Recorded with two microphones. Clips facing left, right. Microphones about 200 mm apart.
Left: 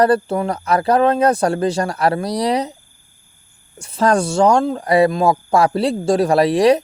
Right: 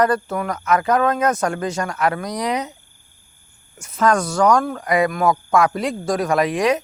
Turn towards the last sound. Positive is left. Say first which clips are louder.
# left 5 dB
turn(degrees=35)  # may be behind; listen again after turning